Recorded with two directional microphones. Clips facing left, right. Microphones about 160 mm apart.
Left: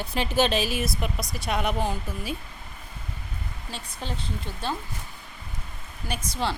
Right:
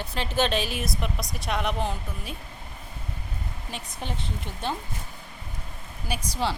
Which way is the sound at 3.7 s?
20° right (ahead or behind).